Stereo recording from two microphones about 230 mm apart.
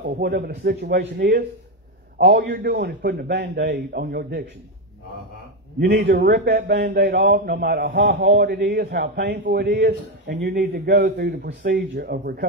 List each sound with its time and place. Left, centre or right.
0.0 s a man's voice: right
5.8 s a man's voice: right